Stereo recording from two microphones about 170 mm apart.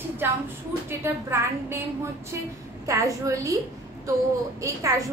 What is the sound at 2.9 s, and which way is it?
A woman's voice, 20° right (ahead or behind).